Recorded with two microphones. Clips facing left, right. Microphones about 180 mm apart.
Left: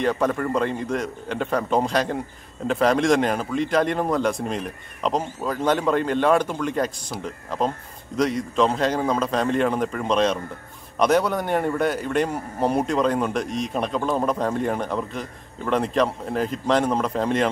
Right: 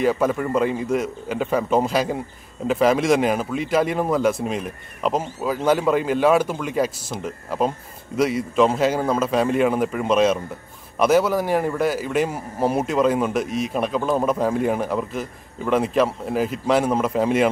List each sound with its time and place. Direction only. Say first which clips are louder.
0.0 s a man's voice: right 2 dB; 5° right (ahead or behind)